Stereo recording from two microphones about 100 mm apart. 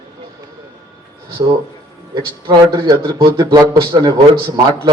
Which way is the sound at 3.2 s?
60° right (ahead or behind).